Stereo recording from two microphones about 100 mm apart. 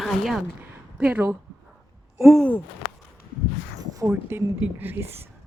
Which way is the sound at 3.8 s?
40° right (ahead or behind).